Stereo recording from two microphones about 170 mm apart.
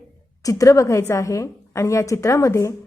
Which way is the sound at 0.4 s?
20° left (ahead or behind).